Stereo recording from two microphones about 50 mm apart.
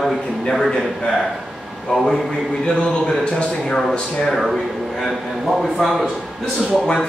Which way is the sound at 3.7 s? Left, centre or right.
Centre.